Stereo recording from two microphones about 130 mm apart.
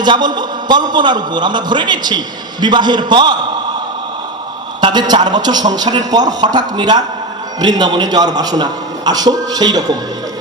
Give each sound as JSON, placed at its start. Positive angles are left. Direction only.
{"t": 0.0, "sound": "a man's voice", "side_deg": -35}
{"t": 4.8, "sound": "a man's voice", "side_deg": -35}